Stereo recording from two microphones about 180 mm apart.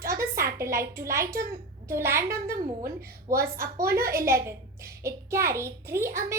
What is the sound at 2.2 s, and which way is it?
Speech, 55° right (ahead or behind).